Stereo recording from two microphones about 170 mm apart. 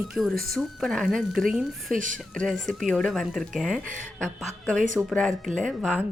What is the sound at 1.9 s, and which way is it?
Speech, 50° right (ahead or behind).